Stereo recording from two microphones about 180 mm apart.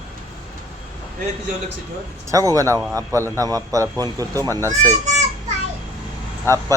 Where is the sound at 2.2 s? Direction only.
20° right (ahead or behind).